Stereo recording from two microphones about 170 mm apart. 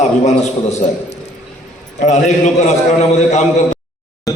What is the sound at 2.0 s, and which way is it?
A man's voice, 45° left (ahead or behind).